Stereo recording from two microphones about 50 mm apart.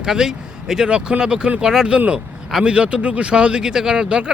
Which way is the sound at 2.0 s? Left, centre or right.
Right.